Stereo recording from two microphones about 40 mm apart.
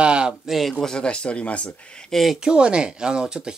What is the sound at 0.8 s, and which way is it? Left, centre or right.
Speech, left.